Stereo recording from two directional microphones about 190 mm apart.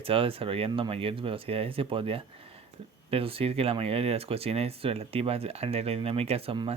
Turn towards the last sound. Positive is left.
turn(degrees=-30)  # may be behind; listen again after turning